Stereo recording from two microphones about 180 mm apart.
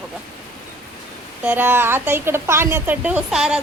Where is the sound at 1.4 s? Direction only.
10° right (ahead or behind).